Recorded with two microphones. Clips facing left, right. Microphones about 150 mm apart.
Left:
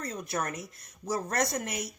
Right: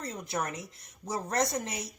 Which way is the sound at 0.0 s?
25° right (ahead or behind).